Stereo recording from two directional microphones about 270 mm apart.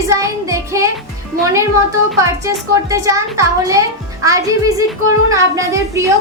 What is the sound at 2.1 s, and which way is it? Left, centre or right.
A woman's voice, centre.